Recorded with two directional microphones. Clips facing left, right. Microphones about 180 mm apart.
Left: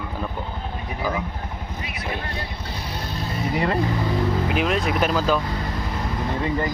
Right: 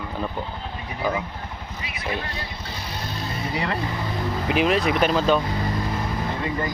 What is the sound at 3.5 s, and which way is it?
Speech, 45° left (ahead or behind).